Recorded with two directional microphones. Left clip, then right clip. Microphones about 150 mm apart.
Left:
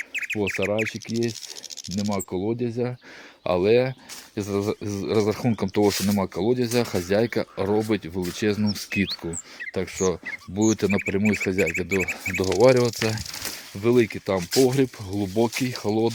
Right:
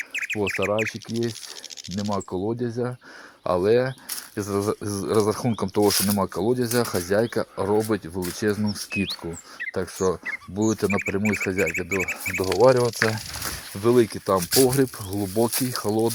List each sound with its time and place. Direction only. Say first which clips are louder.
0.1 s bird: even; 5° left (ahead or behind)
0.4 s speech: right 1 dB; 5° left (ahead or behind)
2.3 s speech: even; 20° left (ahead or behind)
11.2 s speech: left 1 dB; 5° left (ahead or behind)
12.6 s speech: even; 30° left (ahead or behind)
13.8 s speech: right 1 dB; 10° left (ahead or behind)
14.3 s speech: right 1 dB; 20° left (ahead or behind)